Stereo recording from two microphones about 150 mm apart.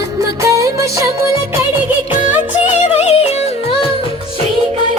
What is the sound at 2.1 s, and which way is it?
Music, 10° right (ahead or behind).